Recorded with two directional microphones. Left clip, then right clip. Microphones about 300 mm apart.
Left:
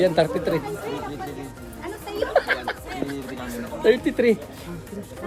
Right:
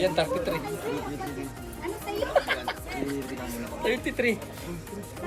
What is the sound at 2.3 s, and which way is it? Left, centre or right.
Speech, left.